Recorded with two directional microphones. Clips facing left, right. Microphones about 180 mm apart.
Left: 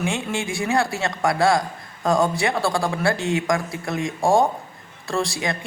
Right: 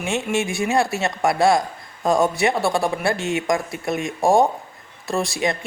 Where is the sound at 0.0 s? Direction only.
20° right (ahead or behind).